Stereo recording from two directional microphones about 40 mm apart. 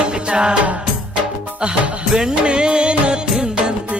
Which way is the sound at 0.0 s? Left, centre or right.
Right.